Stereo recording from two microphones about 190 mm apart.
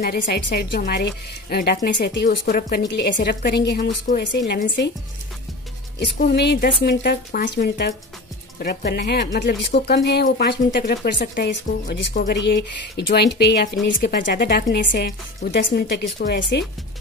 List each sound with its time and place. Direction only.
0.0 s speech: 55° left (ahead or behind)
5.9 s speech: 60° left (ahead or behind)